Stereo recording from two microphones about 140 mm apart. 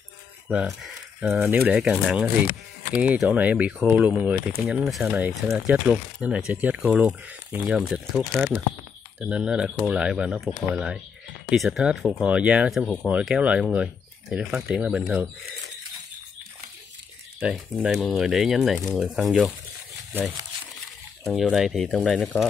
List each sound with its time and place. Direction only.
0.5 s speech: 5° right (ahead or behind)
1.4 s speech: 15° right (ahead or behind)
17.4 s speech: 10° right (ahead or behind)
20.1 s speech: 15° right (ahead or behind)
21.2 s speech: centre (ahead or behind)